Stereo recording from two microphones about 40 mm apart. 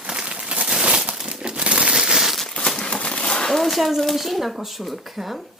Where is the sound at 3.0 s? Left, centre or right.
Left.